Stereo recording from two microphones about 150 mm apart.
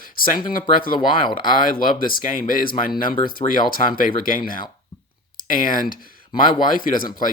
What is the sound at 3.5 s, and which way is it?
Speech, 65° left (ahead or behind).